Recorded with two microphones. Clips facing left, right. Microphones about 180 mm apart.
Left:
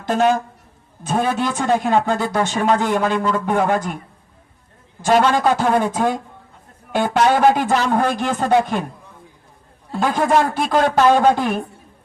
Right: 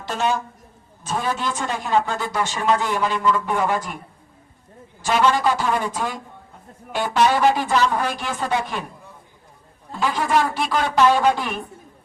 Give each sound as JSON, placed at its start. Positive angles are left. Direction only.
{"t": 0.0, "sound": "a woman's voice", "side_deg": 50}
{"t": 5.0, "sound": "a man's voice", "side_deg": 50}
{"t": 10.0, "sound": "a man's voice", "side_deg": 50}